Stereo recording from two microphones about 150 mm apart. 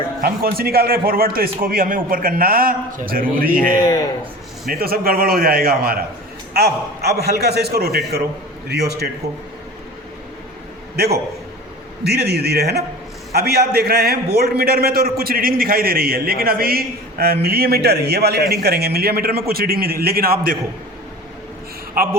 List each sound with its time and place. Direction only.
0.2 s a man's voice: 90° right; by 3.8 s 70° right (ahead or behind)
3.8 s a man's voice: 25° left (ahead or behind)
4.7 s a man's voice: 90° right
10.9 s a man's voice: 90° right